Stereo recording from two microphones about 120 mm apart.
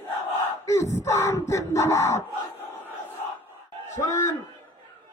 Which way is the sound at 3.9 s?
25° left (ahead or behind).